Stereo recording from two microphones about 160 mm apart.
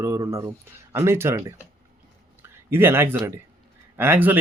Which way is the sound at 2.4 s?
15° right (ahead or behind).